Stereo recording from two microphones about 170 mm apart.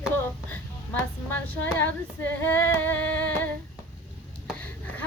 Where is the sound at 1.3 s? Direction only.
10° left (ahead or behind).